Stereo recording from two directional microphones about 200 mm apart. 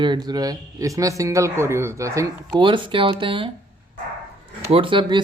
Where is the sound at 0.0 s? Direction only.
20° right (ahead or behind).